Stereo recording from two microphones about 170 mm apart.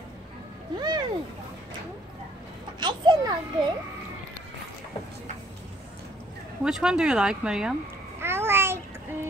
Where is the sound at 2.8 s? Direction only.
25° right (ahead or behind).